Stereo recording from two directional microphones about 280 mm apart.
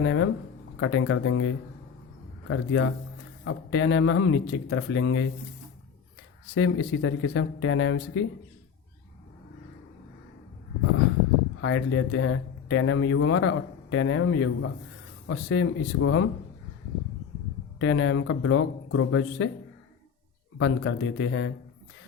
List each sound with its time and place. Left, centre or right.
0.0 s speech: left
6.5 s speech: left
11.6 s speech: left
17.7 s speech: left
20.6 s speech: left